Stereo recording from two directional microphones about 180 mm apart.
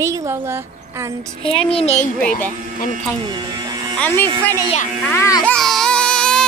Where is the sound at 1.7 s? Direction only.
35° left (ahead or behind).